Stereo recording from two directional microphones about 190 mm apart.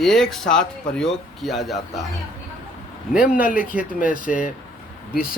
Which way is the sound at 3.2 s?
45° left (ahead or behind).